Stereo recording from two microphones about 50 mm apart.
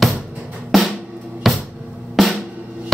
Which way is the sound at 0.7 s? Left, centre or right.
Centre.